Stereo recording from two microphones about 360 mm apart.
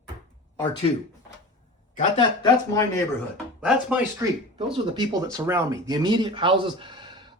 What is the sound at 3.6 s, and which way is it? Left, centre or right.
Speech, centre.